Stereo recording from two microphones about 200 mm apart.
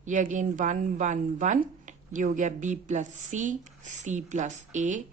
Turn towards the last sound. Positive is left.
turn(degrees=-35)  # may be behind; listen again after turning